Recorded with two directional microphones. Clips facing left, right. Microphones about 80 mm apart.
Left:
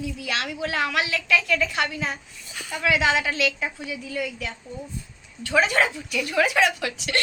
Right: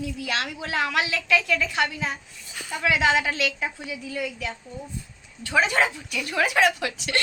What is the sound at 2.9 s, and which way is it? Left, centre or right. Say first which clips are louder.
Speech: even; right.